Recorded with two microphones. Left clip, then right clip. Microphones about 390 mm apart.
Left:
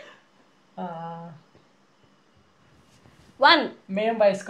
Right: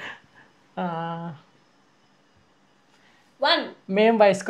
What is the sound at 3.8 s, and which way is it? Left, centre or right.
Speech, right.